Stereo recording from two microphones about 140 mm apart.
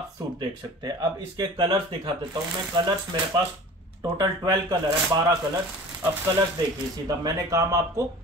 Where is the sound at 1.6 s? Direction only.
40° right (ahead or behind).